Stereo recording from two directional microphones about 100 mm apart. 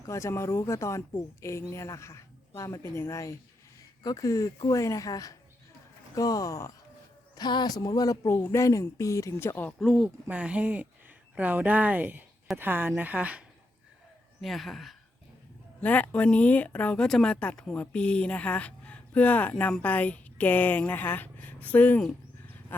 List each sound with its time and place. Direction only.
0.0 s speech: 30° left (ahead or behind)
7.3 s speech: 45° left (ahead or behind)
8.4 s speech: 20° left (ahead or behind)
8.6 s speech: 30° left (ahead or behind)
9.7 s speech: centre (ahead or behind)
10.2 s speech: 15° right (ahead or behind)
14.4 s speech: centre (ahead or behind)
15.8 s speech: 15° left (ahead or behind)